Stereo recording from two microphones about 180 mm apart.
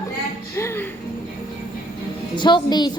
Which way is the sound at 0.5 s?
15° left (ahead or behind).